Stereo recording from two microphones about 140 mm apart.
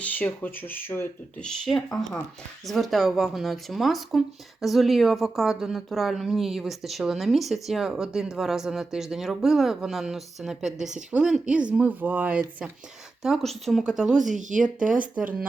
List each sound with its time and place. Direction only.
0.0 s speech: 10° left (ahead or behind)
1.5 s speech: centre (ahead or behind)
13.2 s speech: centre (ahead or behind)
14.3 s speech: 65° right (ahead or behind)
15.0 s speech: 10° right (ahead or behind)